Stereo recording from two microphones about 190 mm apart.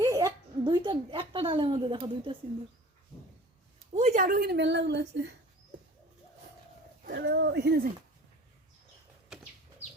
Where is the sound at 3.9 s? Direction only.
40° right (ahead or behind); by 5.3 s 65° right (ahead or behind).